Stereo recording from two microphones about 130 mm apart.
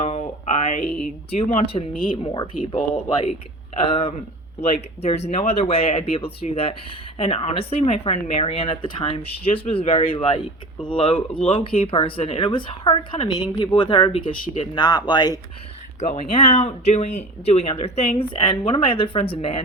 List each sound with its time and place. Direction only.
0.0 s a sound: 50° left (ahead or behind)
1.3 s speech: 50° left (ahead or behind)
2.2 s speech: 35° left (ahead or behind)
16.0 s speech: 60° left (ahead or behind)